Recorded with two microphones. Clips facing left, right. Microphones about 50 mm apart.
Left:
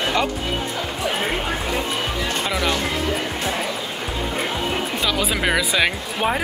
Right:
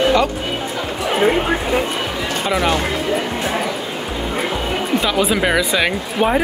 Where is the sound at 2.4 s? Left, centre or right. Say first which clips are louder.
Right 6 dB; centre.